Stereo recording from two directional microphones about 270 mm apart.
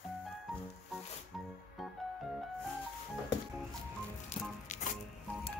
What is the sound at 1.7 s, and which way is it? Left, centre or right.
Music, centre.